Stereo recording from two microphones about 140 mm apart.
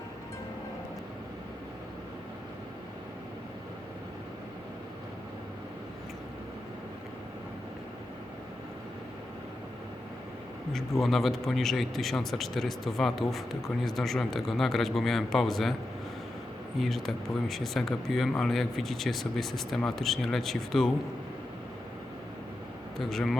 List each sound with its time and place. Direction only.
10.7 s speech: centre (ahead or behind)
16.8 s speech: centre (ahead or behind)
23.0 s speech: centre (ahead or behind)